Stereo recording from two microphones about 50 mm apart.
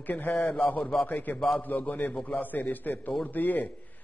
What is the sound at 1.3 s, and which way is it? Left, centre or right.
Speech, centre.